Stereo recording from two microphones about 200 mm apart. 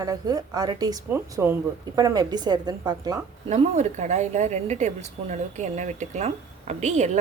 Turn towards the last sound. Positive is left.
turn(degrees=-35)  # may be behind; listen again after turning